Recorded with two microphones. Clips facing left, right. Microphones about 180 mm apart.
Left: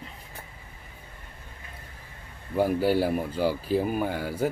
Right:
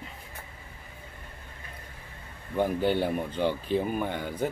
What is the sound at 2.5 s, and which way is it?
Speech, 5° left (ahead or behind).